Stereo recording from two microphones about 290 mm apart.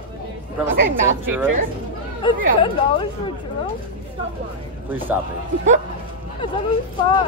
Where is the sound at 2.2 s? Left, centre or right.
Centre.